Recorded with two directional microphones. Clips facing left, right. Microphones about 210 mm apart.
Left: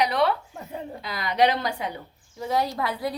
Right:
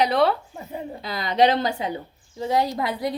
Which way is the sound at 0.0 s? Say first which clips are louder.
Right 3 dB; 30° right (ahead or behind).